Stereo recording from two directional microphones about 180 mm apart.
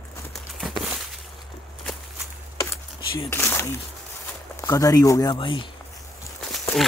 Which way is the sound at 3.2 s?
15° left (ahead or behind).